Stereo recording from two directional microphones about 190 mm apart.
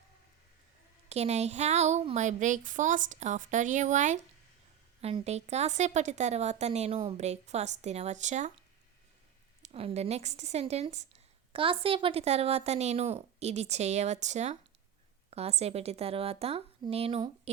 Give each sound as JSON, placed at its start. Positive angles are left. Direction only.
{"t": 1.1, "sound": "a woman's voice", "side_deg": -35}
{"t": 9.6, "sound": "a woman's voice", "side_deg": -30}